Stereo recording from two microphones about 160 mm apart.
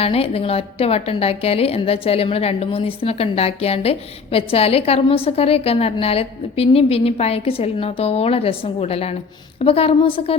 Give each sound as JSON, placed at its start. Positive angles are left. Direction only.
{"t": 0.0, "sound": "a woman's voice", "side_deg": 40}